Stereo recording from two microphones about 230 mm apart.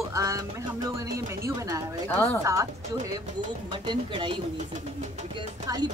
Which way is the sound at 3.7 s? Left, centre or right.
Right.